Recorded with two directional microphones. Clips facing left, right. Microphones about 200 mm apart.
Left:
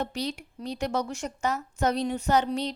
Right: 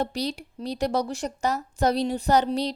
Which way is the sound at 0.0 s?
35° right (ahead or behind).